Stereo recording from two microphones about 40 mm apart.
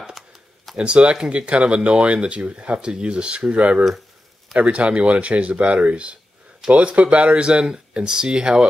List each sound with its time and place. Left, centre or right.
0.2 s computer keyboard: centre
0.7 s speech: right